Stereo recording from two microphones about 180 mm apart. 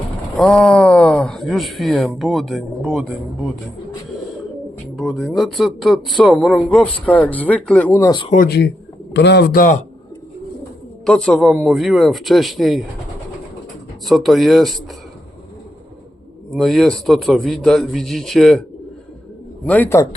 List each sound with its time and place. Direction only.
0.3 s a man's voice: 5° left (ahead or behind)
4.9 s a man's voice: centre (ahead or behind)
8.4 s speech: 65° left (ahead or behind); by 9.8 s 50° left (ahead or behind)
11.0 s a man's voice: 5° left (ahead or behind)
14.0 s a man's voice: centre (ahead or behind)
16.5 s a man's voice: centre (ahead or behind)
19.6 s a man's voice: 10° left (ahead or behind)